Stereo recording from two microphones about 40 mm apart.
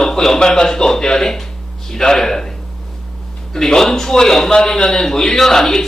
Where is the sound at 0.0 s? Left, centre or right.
Centre.